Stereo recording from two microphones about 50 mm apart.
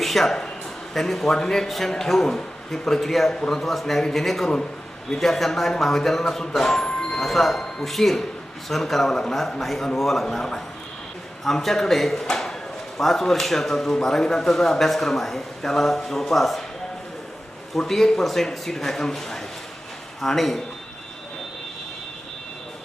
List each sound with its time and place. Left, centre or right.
0.0 s a man's voice: centre
17.7 s a man's voice: centre